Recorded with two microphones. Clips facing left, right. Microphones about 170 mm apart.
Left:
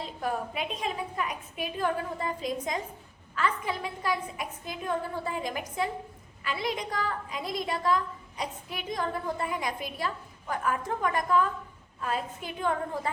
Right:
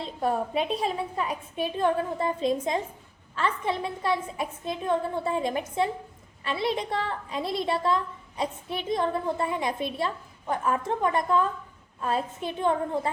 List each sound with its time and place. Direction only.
0.0 s a woman's voice: 30° right (ahead or behind)